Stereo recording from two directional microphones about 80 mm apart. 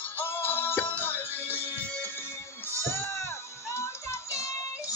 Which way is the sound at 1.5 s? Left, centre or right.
Right.